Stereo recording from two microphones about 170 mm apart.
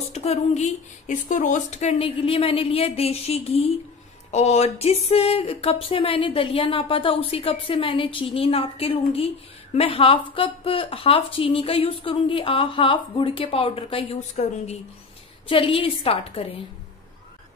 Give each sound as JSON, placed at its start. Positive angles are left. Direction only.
{"t": 0.1, "sound": "speech", "side_deg": 40}